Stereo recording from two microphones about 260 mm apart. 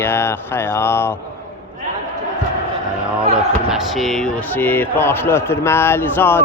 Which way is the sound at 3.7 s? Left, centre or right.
Centre.